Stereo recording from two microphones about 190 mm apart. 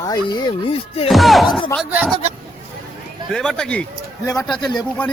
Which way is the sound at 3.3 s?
5° left (ahead or behind).